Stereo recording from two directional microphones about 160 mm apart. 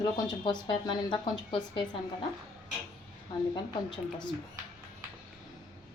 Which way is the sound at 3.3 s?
25° left (ahead or behind).